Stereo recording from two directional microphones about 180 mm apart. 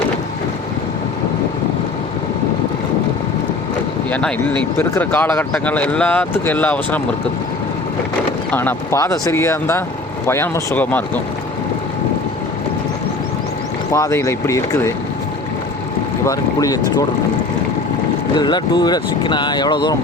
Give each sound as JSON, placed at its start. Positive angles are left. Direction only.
{"t": 4.8, "sound": "speech", "side_deg": 10}
{"t": 8.5, "sound": "speech", "side_deg": 15}
{"t": 13.9, "sound": "speech", "side_deg": 15}
{"t": 16.2, "sound": "speech", "side_deg": 20}
{"t": 18.3, "sound": "speech", "side_deg": 25}